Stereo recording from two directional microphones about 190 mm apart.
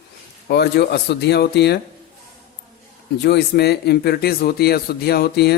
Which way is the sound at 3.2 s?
60° left (ahead or behind).